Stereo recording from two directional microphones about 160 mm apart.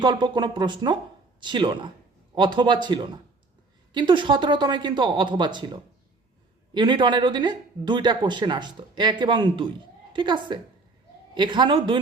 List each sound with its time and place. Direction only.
0.0 s speech: 25° right (ahead or behind)